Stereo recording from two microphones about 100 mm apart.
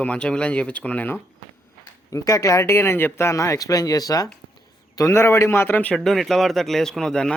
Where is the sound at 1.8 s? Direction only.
35° left (ahead or behind).